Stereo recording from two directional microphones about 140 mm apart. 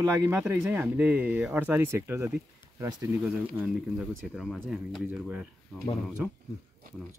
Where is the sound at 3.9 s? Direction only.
5° right (ahead or behind).